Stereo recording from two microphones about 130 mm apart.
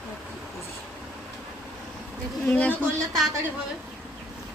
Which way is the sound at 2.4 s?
15° left (ahead or behind).